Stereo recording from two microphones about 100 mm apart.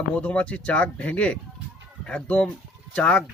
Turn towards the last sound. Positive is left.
turn(degrees=10)  # may be behind; listen again after turning